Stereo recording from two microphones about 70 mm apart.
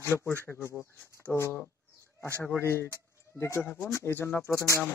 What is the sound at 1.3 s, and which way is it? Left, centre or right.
Speech, left.